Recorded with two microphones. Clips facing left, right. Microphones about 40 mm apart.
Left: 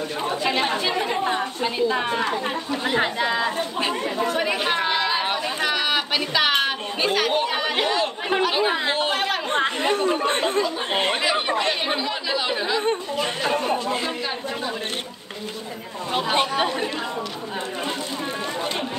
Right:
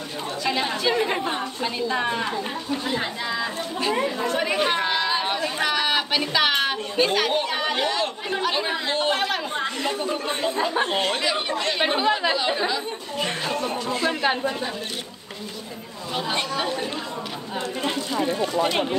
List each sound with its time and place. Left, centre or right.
0.4 s speech: left
1.2 s a woman's voice: centre
2.8 s speech: left
4.0 s chatter: centre
5.6 s a sound: centre
6.5 s speech: centre
9.6 s speech: left; by 12.7 s centre
13.2 s speech: left
16.2 s speech: left